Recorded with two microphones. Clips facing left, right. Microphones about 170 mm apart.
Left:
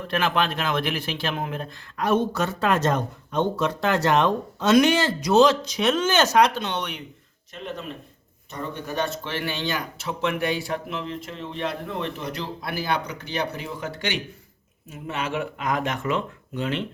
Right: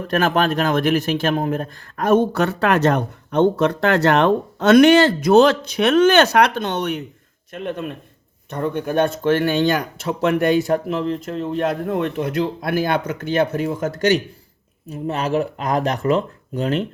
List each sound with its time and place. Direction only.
0.1 s a man's voice: 45° right (ahead or behind)
7.5 s a man's voice: 55° right (ahead or behind); by 16.8 s 40° right (ahead or behind)